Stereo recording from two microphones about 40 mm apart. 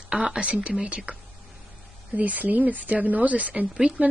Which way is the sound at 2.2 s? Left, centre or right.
Right.